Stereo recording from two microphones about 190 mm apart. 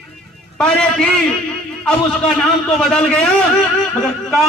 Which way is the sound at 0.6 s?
5° left (ahead or behind).